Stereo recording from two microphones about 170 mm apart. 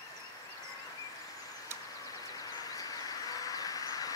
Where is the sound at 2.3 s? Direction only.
20° left (ahead or behind).